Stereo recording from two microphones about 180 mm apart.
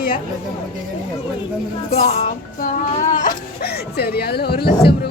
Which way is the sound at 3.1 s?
45° left (ahead or behind).